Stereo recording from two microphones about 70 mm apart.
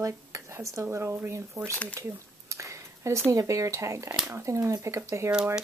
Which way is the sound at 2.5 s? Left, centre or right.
Right.